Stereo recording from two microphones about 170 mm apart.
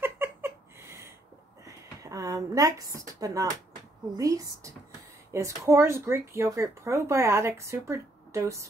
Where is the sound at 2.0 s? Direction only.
20° right (ahead or behind).